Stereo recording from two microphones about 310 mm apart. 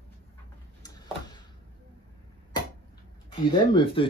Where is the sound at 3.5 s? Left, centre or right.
Centre.